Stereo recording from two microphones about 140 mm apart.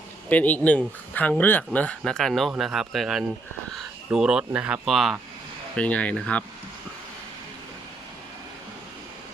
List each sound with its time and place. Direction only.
0.3 s speech: 10° left (ahead or behind)